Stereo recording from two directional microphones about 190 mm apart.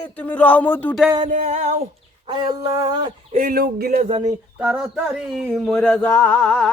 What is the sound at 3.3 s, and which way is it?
Speech, 45° right (ahead or behind).